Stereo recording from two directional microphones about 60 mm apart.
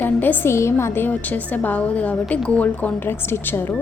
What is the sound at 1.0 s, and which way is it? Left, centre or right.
A woman's voice, left.